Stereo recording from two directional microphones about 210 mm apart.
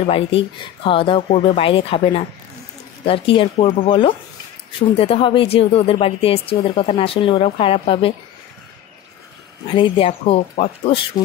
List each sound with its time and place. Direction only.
0.0 s speech: 25° left (ahead or behind)
9.8 s speech: 25° left (ahead or behind)